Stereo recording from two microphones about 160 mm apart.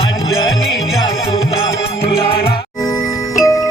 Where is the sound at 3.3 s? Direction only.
20° left (ahead or behind).